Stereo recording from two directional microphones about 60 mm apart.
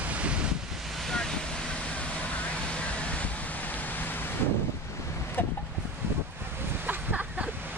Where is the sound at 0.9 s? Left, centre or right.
Centre.